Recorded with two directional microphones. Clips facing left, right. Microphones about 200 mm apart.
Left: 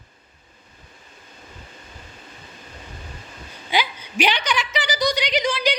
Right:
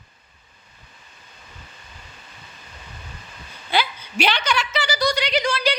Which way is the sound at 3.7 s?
15° left (ahead or behind).